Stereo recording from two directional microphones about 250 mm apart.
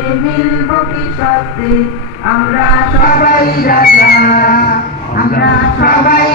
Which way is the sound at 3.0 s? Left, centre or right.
Left.